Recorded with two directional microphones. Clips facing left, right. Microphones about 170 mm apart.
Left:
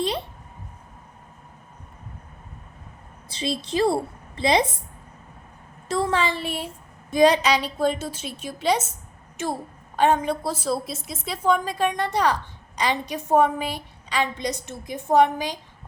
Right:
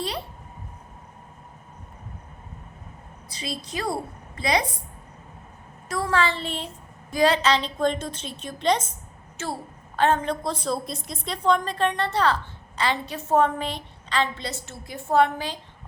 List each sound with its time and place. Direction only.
0.0 s a sound: 20° left (ahead or behind)
3.2 s a woman's voice: 25° left (ahead or behind)
5.9 s a woman's voice: 20° left (ahead or behind)